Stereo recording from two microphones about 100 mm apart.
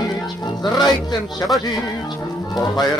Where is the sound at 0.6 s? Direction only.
45° left (ahead or behind).